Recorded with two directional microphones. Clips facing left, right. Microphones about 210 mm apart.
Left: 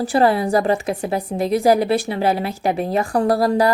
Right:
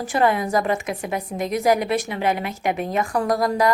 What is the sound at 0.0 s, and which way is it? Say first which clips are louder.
Speech: left 4 dB; 35° left (ahead or behind).